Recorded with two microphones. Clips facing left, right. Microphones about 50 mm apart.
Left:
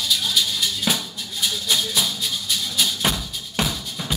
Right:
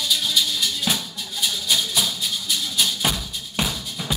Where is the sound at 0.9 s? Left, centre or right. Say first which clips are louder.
Left 2 dB; centre.